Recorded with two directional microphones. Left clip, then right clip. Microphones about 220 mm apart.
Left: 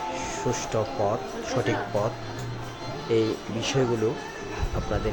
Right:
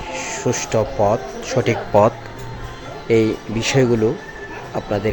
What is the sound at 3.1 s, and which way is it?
Speech, 25° right (ahead or behind).